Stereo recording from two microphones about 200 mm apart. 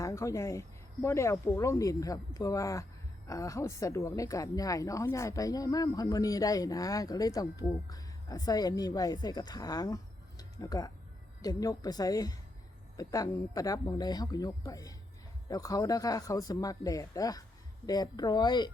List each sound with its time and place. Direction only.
0.0 s a woman's voice: 15° left (ahead or behind)